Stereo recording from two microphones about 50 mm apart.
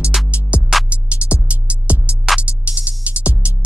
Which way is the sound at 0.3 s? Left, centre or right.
Right.